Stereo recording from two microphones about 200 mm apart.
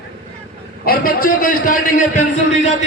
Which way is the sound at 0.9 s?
45° left (ahead or behind).